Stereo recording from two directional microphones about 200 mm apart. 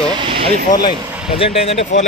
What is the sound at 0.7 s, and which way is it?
Speech, 25° left (ahead or behind).